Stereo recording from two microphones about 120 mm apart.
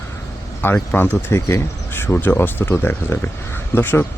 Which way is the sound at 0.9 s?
15° left (ahead or behind).